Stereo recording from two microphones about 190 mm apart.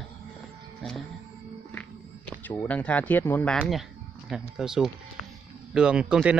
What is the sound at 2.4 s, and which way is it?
Speech, 10° left (ahead or behind).